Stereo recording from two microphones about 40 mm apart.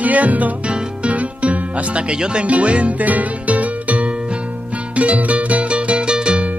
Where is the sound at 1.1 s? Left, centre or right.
Right.